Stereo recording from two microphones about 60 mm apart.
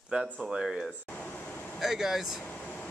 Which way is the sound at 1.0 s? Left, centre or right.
Left.